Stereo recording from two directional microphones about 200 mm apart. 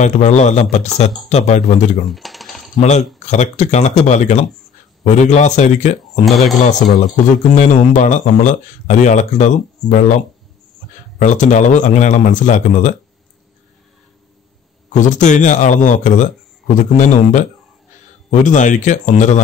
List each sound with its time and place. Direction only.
0.0 s speech: 35° left (ahead or behind)
2.0 s typing: centre (ahead or behind)
2.8 s speech: 35° left (ahead or behind)
6.2 s speech: centre (ahead or behind)
6.7 s speech: 40° left (ahead or behind)
14.9 s speech: 40° left (ahead or behind)